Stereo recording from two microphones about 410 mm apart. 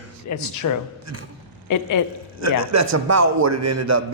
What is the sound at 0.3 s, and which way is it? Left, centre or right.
A woman's voice, left.